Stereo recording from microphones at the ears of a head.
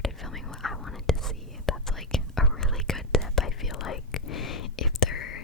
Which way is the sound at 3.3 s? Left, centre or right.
Left.